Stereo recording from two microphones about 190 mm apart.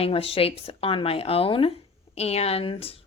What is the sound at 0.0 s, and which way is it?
A woman's voice, 30° left (ahead or behind).